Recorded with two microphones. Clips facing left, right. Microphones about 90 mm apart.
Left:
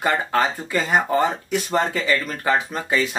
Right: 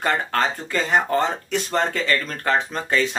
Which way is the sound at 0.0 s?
10° left (ahead or behind).